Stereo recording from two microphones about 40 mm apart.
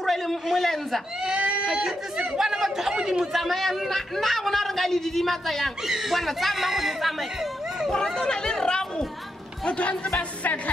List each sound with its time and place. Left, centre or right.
0.0 s a sound: centre
1.2 s a sound: right
1.7 s speech: centre
2.3 s chatter: centre
3.3 s a man's voice: centre
5.9 s a man's voice: centre
7.9 s speech: centre
9.7 s speech: left